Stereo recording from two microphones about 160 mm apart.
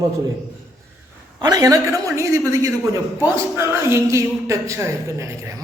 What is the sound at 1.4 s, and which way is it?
A woman's voice, 25° right (ahead or behind).